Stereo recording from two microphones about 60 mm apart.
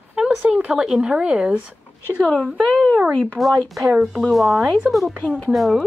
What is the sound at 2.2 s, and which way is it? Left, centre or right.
Speech, centre.